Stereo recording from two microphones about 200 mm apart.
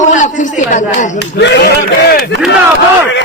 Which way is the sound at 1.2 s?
60° left (ahead or behind).